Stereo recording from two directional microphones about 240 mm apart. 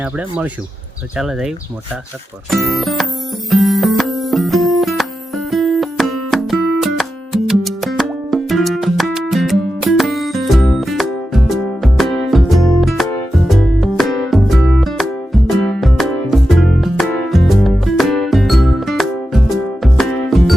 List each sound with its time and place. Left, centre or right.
0.0 s speech: centre
3.5 s music: centre